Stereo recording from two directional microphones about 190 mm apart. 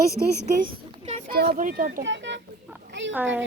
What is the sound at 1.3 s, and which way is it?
Speech, 50° right (ahead or behind).